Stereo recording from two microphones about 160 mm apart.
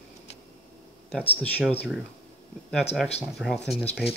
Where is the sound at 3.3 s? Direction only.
Centre (ahead or behind).